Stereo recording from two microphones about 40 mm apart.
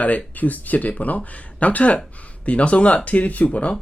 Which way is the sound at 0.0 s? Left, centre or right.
Left.